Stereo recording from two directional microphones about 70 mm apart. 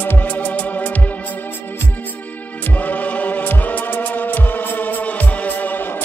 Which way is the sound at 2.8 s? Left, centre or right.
Left.